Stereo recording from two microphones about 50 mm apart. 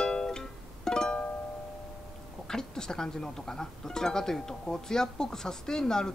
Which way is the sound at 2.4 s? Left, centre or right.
Centre.